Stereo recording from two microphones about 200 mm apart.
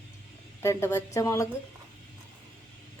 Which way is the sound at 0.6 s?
15° left (ahead or behind).